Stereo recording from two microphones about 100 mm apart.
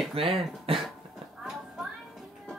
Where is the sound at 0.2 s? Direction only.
75° right (ahead or behind).